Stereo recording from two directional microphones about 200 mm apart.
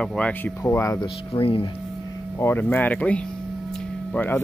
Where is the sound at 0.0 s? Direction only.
10° left (ahead or behind).